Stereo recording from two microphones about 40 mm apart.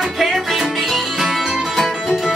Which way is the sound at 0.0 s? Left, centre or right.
Centre.